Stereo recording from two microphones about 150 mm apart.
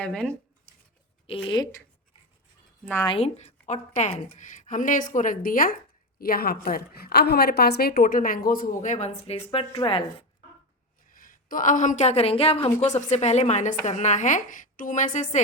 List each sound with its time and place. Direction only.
0.0 s speech: 5° left (ahead or behind)
1.3 s speech: 35° left (ahead or behind)
3.1 s a woman's voice: 40° left (ahead or behind); by 5.7 s 70° left (ahead or behind)
6.1 s a woman's voice: 80° left; by 10.2 s 35° left (ahead or behind)
11.1 s a woman's voice: 65° left (ahead or behind)